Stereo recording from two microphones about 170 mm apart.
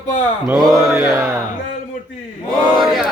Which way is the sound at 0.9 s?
15° right (ahead or behind).